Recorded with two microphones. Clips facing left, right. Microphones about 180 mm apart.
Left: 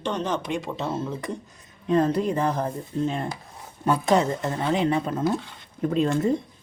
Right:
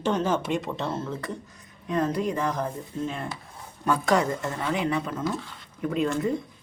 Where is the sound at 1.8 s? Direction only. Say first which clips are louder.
Left 4 dB; 30° left (ahead or behind).